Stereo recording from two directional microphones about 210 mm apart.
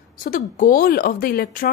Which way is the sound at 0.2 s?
40° left (ahead or behind).